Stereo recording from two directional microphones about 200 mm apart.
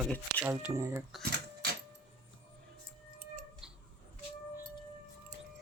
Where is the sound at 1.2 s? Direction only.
50° right (ahead or behind).